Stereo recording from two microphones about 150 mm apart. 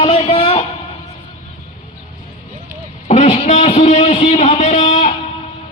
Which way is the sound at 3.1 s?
45° left (ahead or behind).